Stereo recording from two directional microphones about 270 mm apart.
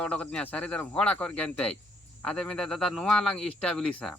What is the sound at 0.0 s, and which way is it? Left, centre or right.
A man's voice, centre.